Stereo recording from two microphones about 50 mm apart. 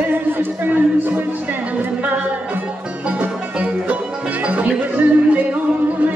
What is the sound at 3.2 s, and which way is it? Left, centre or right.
Music, right.